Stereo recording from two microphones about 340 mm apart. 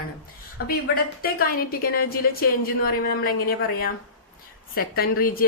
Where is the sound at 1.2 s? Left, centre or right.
Left.